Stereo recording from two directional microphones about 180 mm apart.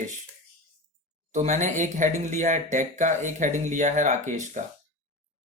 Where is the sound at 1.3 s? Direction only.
40° right (ahead or behind).